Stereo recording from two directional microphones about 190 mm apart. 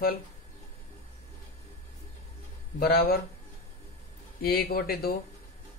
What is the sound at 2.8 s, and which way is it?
Speech, 55° left (ahead or behind).